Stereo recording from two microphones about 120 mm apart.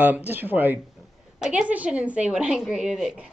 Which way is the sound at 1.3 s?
5° right (ahead or behind).